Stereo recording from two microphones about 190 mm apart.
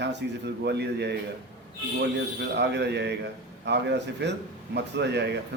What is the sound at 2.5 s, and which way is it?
A man's voice, 65° right (ahead or behind).